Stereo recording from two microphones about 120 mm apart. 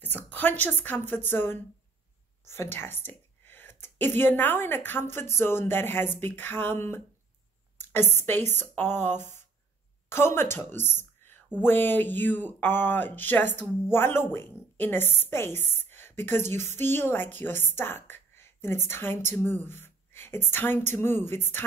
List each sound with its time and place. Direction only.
0.0 s a woman's voice: 15° left (ahead or behind)